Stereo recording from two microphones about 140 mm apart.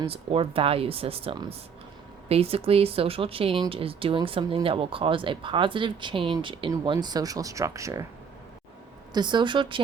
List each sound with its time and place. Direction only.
0.0 s speech: 40° right (ahead or behind); by 8.0 s 20° right (ahead or behind)
9.1 s speech: 35° right (ahead or behind)